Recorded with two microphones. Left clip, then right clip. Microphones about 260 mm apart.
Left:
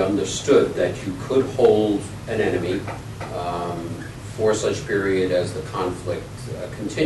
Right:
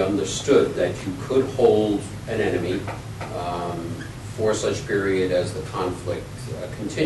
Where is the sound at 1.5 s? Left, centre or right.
Left.